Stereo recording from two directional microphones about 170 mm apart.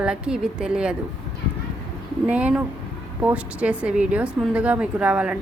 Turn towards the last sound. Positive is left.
turn(degrees=-5)  # may be behind; listen again after turning